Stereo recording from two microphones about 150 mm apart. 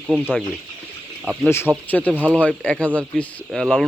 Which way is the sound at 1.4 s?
15° left (ahead or behind).